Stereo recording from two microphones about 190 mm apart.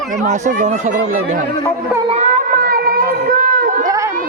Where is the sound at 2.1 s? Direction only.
35° right (ahead or behind).